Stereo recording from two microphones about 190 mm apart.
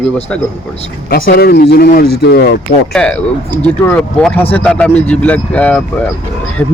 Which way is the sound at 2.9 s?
5° left (ahead or behind).